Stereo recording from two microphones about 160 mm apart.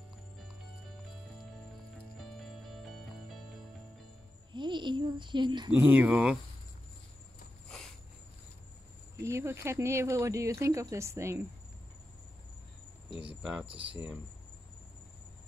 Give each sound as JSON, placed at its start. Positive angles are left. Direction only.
{"t": 2.1, "sound": "music", "side_deg": 0}
{"t": 4.5, "sound": "a child's voice", "side_deg": -30}
{"t": 5.8, "sound": "speech", "side_deg": -10}
{"t": 9.2, "sound": "speech", "side_deg": -15}
{"t": 13.1, "sound": "speech", "side_deg": -10}